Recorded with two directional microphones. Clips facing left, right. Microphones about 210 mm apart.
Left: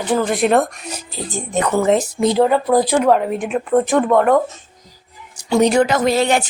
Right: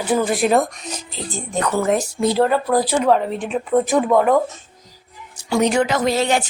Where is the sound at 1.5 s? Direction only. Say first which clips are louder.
Left 3 dB; 20° left (ahead or behind); by 4.4 s centre (ahead or behind).